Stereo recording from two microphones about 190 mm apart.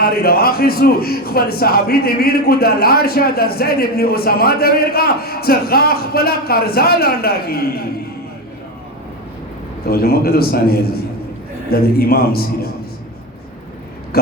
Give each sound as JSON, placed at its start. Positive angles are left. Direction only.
{"t": 0.0, "sound": "a man's voice", "side_deg": 55}
{"t": 9.8, "sound": "a man's voice", "side_deg": 55}